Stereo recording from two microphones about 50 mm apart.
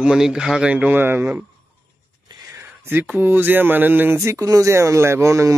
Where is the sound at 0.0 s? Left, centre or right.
Centre.